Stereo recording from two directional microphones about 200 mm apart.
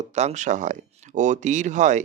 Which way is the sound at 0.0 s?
35° right (ahead or behind).